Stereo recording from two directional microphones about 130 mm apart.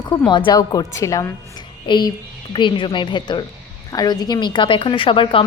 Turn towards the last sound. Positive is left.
turn(degrees=45)  # may be behind; listen again after turning